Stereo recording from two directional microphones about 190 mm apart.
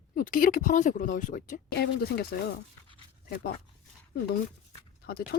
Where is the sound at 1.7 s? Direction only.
55° left (ahead or behind).